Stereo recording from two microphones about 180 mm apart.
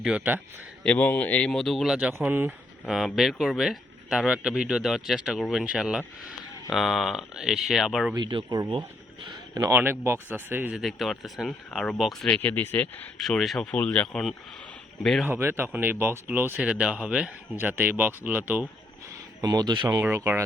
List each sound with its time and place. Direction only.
0.0 s speech: 5° right (ahead or behind)
0.9 s speech: 10° left (ahead or behind)
8.1 s speech: 25° right (ahead or behind); by 15.3 s centre (ahead or behind)
15.3 s speech: 15° right (ahead or behind)
19.4 s speech: 25° right (ahead or behind)
20.0 s speech: 10° right (ahead or behind)